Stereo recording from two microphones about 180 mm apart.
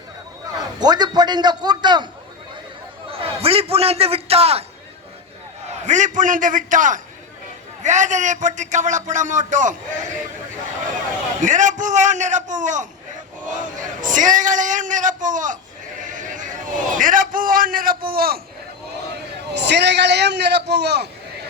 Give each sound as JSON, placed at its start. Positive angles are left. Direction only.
{"t": 0.8, "sound": "a man's voice", "side_deg": -25}
{"t": 3.1, "sound": "a man's voice", "side_deg": -30}
{"t": 5.8, "sound": "a man's voice", "side_deg": -45}
{"t": 11.3, "sound": "a man's voice", "side_deg": -45}
{"t": 19.5, "sound": "a man's voice", "side_deg": -70}